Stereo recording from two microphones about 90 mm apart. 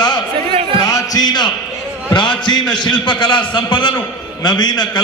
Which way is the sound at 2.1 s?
65° left (ahead or behind).